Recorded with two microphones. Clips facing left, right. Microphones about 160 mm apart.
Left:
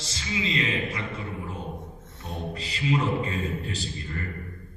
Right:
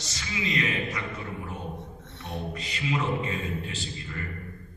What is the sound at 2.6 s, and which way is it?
Music, 30° left (ahead or behind).